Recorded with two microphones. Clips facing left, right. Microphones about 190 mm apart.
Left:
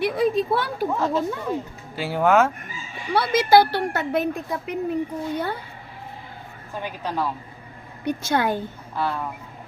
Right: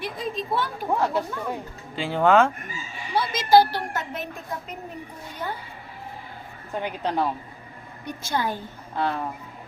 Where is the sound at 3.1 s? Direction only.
65° left (ahead or behind).